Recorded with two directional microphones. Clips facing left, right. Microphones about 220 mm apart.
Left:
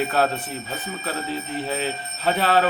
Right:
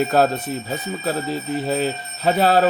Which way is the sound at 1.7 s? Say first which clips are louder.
Right 6 dB; 45° right (ahead or behind).